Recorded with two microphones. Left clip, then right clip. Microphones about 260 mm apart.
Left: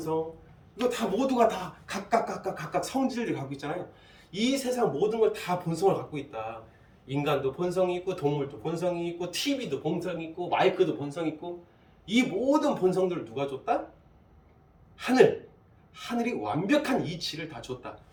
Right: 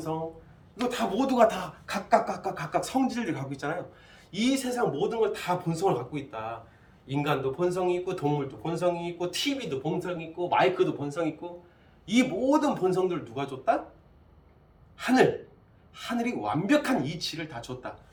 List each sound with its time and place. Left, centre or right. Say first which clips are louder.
0.8 s speech: left 1 dB; centre
14.9 s speech: left 1 dB; centre